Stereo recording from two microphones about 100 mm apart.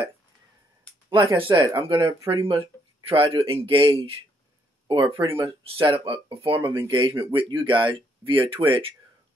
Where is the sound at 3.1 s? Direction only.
65° right (ahead or behind).